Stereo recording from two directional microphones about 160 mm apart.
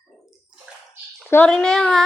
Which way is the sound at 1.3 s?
10° left (ahead or behind).